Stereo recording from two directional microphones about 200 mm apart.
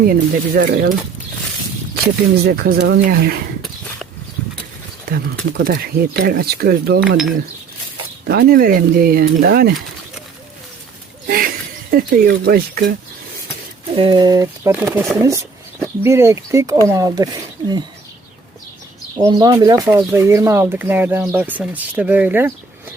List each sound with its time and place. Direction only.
0.0 s speech: 45° right (ahead or behind)
2.4 s speech: 50° right (ahead or behind)
5.1 s speech: 50° right (ahead or behind)
8.3 s speech: 50° right (ahead or behind)
11.3 s a sound: 45° right (ahead or behind)
13.9 s speech: 25° right (ahead or behind); by 15.2 s 5° right (ahead or behind)
15.2 s speech: 15° right (ahead or behind)
19.2 s speech: 20° right (ahead or behind)